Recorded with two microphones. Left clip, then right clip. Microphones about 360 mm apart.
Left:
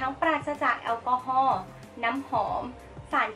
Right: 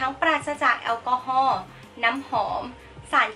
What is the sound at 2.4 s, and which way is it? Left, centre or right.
Speech, centre.